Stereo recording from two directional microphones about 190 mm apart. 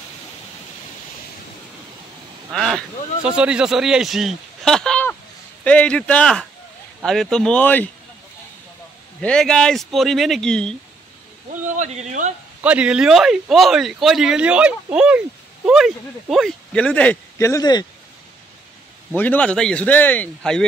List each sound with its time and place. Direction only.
2.5 s speech: 5° left (ahead or behind)
9.2 s speech: 5° left (ahead or behind)
11.6 s speech: 40° right (ahead or behind)
12.6 s speech: 5° right (ahead or behind); by 17.8 s 20° left (ahead or behind)
19.1 s speech: 10° left (ahead or behind)